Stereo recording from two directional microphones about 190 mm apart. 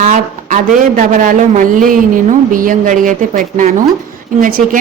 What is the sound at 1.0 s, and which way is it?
A woman's voice, 40° right (ahead or behind).